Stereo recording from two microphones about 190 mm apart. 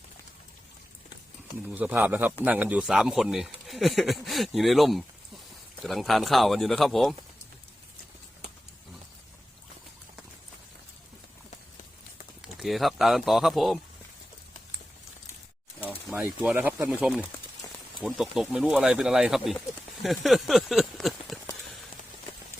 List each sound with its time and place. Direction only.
1.6 s speech: 10° right (ahead or behind)
12.5 s speech: centre (ahead or behind)
16.0 s speech: 5° right (ahead or behind)